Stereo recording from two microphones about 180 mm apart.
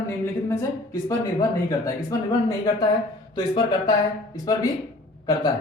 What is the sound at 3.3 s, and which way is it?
Speech, 25° left (ahead or behind).